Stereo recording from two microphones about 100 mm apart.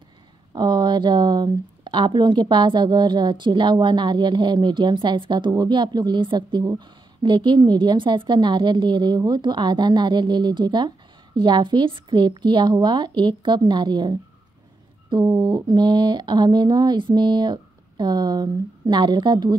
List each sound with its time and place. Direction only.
0.5 s speech: 45° right (ahead or behind)
15.4 s speech: 40° right (ahead or behind)